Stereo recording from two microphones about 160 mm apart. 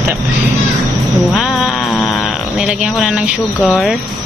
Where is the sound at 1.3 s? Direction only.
Centre (ahead or behind).